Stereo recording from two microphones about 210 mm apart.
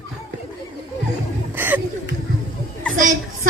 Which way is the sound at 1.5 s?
10° right (ahead or behind).